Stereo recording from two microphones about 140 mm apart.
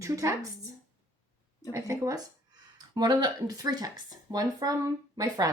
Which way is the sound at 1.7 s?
20° right (ahead or behind).